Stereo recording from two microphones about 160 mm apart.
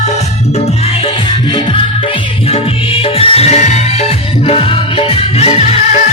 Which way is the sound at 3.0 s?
35° left (ahead or behind).